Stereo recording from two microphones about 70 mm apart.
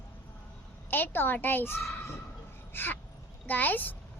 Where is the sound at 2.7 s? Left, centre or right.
Left.